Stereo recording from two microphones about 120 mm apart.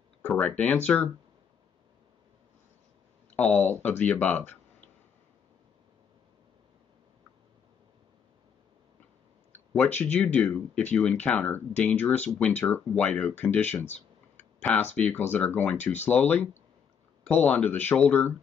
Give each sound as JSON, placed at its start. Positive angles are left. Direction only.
{"t": 0.3, "sound": "speech", "side_deg": 5}
{"t": 3.3, "sound": "speech", "side_deg": 10}
{"t": 9.5, "sound": "a sound", "side_deg": 15}
{"t": 10.1, "sound": "speech", "side_deg": 15}
{"t": 13.8, "sound": "clicking", "side_deg": 70}
{"t": 14.6, "sound": "speech", "side_deg": 10}